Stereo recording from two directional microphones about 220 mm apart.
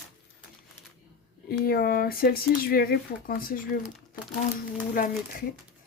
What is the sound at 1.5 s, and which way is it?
Speech, 45° left (ahead or behind).